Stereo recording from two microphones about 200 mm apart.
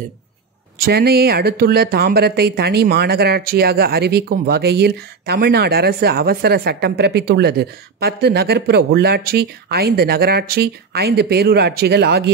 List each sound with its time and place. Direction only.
0.8 s speech: 50° right (ahead or behind)